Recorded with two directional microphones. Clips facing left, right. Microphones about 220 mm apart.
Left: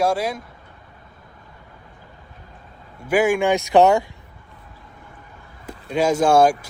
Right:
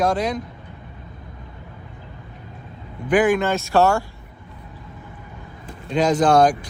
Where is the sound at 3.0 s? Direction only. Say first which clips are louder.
Even; 10° left (ahead or behind).